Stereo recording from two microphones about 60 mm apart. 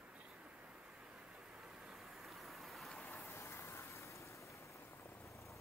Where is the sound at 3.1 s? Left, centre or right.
Left.